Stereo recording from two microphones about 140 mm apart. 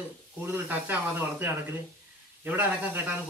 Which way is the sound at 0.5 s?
15° right (ahead or behind).